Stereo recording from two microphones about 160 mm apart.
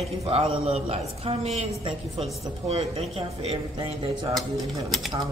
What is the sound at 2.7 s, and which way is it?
Speech, 35° right (ahead or behind).